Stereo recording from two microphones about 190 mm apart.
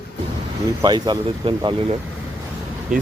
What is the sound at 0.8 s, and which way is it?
Speech, 20° right (ahead or behind).